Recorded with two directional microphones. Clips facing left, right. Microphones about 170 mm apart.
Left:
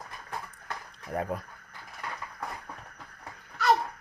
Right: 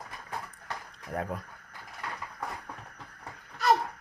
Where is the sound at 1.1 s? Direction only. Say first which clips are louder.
Left 2 dB; 5° left (ahead or behind).